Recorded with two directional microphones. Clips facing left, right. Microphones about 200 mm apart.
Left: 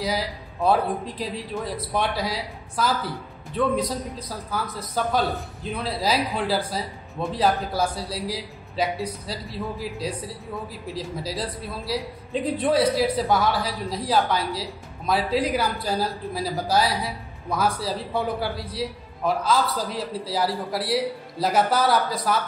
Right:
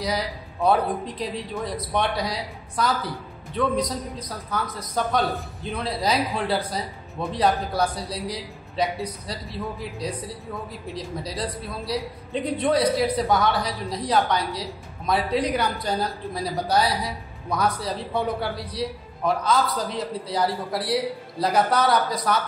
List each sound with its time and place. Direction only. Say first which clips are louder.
0.0 s a man's voice: even; 5° left (ahead or behind)
3.7 s a man's voice: even; 25° left (ahead or behind)
4.3 s a man's voice: right 1 dB; 5° left (ahead or behind)